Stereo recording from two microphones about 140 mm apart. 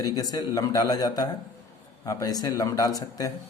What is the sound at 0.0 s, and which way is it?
Speech, 25° left (ahead or behind).